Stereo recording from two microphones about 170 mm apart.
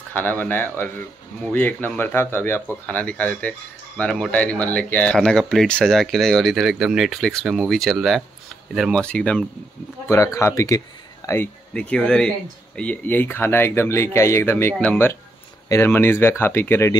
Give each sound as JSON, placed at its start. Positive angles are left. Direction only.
{"t": 0.1, "sound": "speech", "side_deg": 10}
{"t": 10.0, "sound": "speech", "side_deg": 15}